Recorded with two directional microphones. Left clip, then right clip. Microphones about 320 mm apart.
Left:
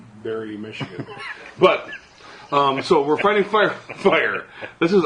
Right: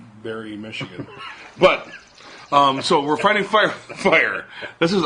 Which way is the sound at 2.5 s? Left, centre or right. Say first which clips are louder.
Right 2 dB; right.